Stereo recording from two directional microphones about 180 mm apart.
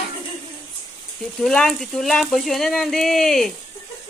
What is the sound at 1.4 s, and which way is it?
Speech, 5° left (ahead or behind).